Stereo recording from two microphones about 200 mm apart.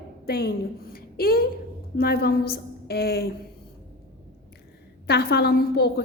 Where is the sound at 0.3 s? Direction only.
50° left (ahead or behind).